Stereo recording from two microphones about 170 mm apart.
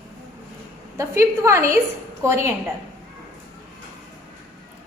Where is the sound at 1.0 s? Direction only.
15° right (ahead or behind).